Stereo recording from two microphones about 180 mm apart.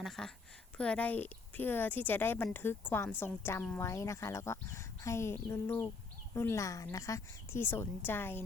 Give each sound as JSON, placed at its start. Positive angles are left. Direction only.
{"t": 0.0, "sound": "a woman's voice", "side_deg": 0}